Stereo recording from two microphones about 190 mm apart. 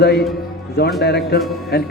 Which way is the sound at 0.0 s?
60° left (ahead or behind).